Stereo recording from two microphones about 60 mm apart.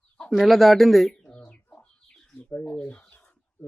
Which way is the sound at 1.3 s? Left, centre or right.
Left.